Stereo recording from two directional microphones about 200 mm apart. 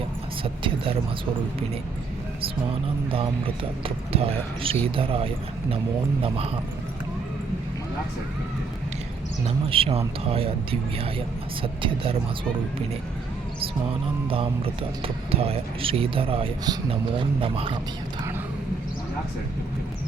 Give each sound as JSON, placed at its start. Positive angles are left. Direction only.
{"t": 0.4, "sound": "speech", "side_deg": -25}
{"t": 3.1, "sound": "speech", "side_deg": -25}
{"t": 9.6, "sound": "speech", "side_deg": -25}
{"t": 14.3, "sound": "speech", "side_deg": -25}